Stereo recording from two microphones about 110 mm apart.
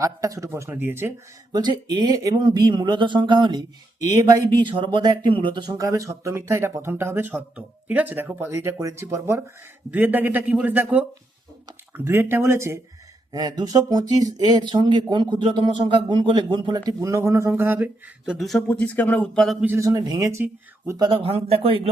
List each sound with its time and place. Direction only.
0.0 s speech: 30° right (ahead or behind)
1.5 s speech: 40° right (ahead or behind)
5.7 s a man's voice: 30° right (ahead or behind)
13.3 s speech: 35° right (ahead or behind)
17.0 s speech: 30° right (ahead or behind)
18.3 s speech: centre (ahead or behind)
18.7 s speech: 15° left (ahead or behind)
19.8 s speech: 35° right (ahead or behind)
21.1 s speech: 60° right (ahead or behind)